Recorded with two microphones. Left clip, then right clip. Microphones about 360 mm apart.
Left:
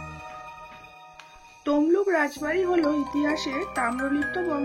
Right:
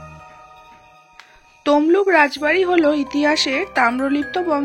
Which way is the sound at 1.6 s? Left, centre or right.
Centre.